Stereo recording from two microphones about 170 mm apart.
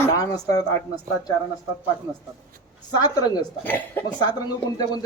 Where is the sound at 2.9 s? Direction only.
25° left (ahead or behind).